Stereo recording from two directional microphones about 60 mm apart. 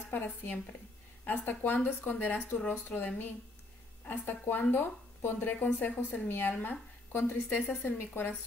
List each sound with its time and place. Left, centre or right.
0.1 s speech: left